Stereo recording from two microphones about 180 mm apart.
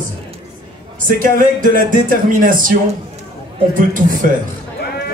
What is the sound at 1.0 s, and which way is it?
A man's voice, 50° right (ahead or behind).